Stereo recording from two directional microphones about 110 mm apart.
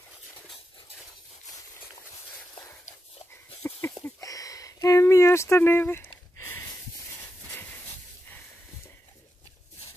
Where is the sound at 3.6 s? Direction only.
25° left (ahead or behind).